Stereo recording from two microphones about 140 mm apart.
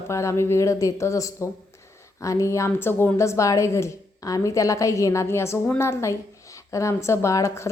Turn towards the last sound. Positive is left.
turn(degrees=20)  # may be behind; listen again after turning